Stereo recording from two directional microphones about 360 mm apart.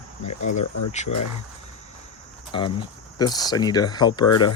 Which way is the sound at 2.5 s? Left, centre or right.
Centre.